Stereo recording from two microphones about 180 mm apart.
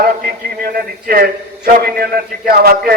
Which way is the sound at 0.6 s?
55° right (ahead or behind).